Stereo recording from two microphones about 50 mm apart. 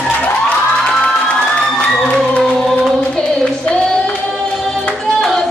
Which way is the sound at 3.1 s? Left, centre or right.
Left.